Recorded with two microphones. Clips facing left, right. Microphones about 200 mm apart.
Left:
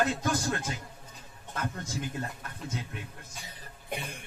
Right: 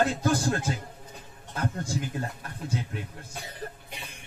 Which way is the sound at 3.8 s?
55° left (ahead or behind).